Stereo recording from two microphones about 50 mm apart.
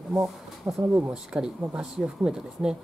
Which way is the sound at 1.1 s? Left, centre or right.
Centre.